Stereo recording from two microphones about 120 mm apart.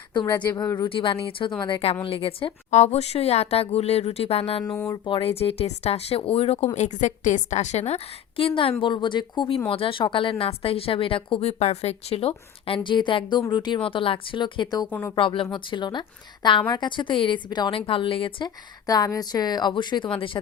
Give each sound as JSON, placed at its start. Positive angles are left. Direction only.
{"t": 0.1, "sound": "speech", "side_deg": 40}
{"t": 2.6, "sound": "speech", "side_deg": 70}
{"t": 4.6, "sound": "speech", "side_deg": 5}
{"t": 5.0, "sound": "speech", "side_deg": 45}
{"t": 5.4, "sound": "speech", "side_deg": 55}
{"t": 6.7, "sound": "a woman's voice", "side_deg": 80}
{"t": 14.8, "sound": "speech", "side_deg": 15}
{"t": 15.1, "sound": "a woman's voice", "side_deg": 45}
{"t": 18.9, "sound": "a woman's voice", "side_deg": 30}